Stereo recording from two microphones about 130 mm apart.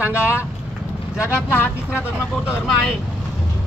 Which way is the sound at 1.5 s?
15° left (ahead or behind).